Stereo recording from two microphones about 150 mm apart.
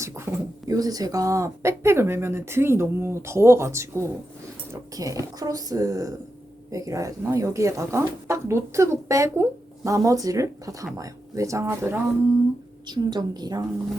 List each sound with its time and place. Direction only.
0.3 s a sound: 15° right (ahead or behind)
0.7 s speech: 25° right (ahead or behind)
12.9 s speech: 30° right (ahead or behind)